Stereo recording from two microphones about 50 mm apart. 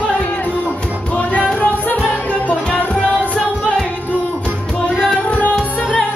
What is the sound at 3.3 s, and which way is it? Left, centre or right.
Music, centre.